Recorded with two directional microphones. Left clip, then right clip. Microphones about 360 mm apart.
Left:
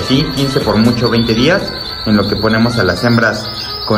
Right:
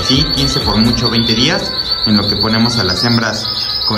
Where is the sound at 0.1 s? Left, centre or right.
Centre.